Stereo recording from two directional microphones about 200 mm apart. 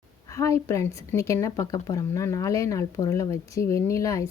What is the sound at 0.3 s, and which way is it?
Speech, 15° left (ahead or behind).